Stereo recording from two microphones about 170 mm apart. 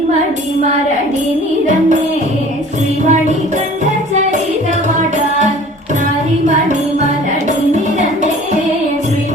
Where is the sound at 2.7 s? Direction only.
45° right (ahead or behind).